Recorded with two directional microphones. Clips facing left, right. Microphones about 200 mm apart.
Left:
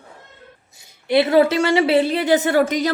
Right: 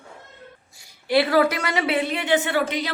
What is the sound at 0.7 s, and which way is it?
A woman's voice, 20° left (ahead or behind).